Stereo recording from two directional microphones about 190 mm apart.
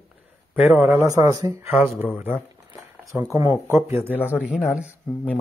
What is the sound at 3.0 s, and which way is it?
Speech, 15° right (ahead or behind).